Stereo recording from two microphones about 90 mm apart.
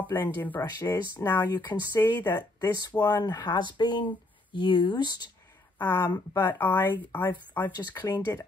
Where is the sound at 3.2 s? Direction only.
55° left (ahead or behind).